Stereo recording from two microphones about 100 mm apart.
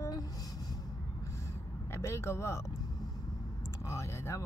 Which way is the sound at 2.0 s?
25° left (ahead or behind).